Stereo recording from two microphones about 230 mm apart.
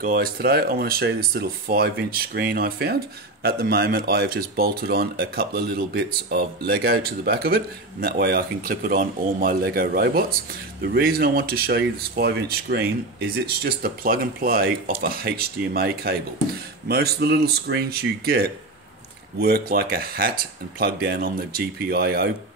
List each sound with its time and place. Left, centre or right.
0.0 s speech: right